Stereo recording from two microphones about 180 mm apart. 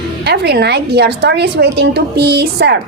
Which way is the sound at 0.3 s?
65° right (ahead or behind).